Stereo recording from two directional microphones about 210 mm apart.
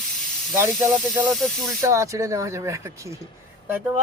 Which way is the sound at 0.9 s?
Centre (ahead or behind).